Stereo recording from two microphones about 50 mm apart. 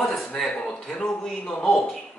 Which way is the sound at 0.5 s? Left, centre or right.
Left.